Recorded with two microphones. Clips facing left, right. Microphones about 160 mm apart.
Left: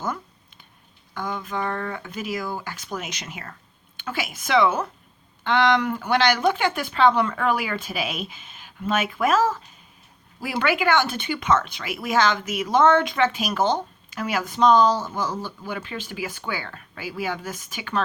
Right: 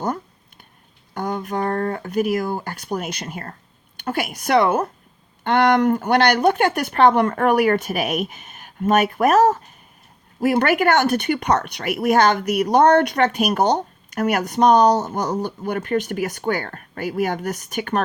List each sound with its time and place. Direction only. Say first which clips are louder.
1.1 s speech: right 5 dB; 45° right (ahead or behind)
11.3 s speech: right 2 dB; 40° right (ahead or behind)
11.6 s speech: right 9 dB; 60° right (ahead or behind); by 13.2 s 45° right (ahead or behind)
13.2 s speech: right 4 dB; 60° right (ahead or behind)
15.3 s speech: right 7 dB; 20° right (ahead or behind)
15.6 s speech: right 10 dB; 60° right (ahead or behind)